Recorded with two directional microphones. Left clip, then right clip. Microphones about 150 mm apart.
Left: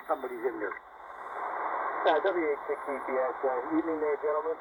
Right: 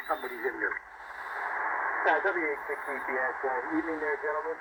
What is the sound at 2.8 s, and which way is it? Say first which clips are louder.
Speech: even; 40° left (ahead or behind).